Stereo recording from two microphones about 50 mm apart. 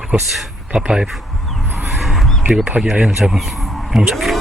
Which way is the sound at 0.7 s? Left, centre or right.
Centre.